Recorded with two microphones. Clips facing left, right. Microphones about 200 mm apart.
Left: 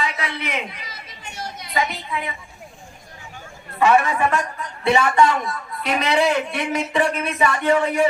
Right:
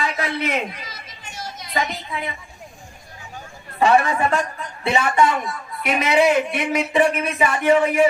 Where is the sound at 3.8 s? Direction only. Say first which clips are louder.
Even; 30° right (ahead or behind).